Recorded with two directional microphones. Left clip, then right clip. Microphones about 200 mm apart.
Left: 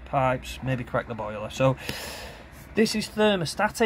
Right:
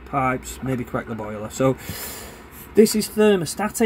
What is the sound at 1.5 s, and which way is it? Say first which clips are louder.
Speech: right 3 dB; 20° left (ahead or behind).